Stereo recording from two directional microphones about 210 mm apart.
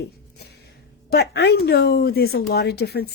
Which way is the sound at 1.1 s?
50° left (ahead or behind).